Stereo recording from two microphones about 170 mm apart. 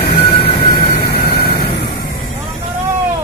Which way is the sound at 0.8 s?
70° left (ahead or behind).